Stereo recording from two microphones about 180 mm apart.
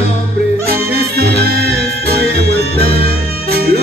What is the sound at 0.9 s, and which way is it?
Music, 60° right (ahead or behind).